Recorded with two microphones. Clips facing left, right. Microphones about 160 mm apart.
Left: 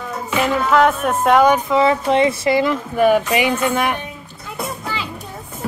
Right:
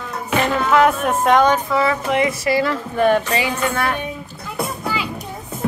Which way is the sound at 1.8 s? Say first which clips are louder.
Left 3 dB; 25° left (ahead or behind).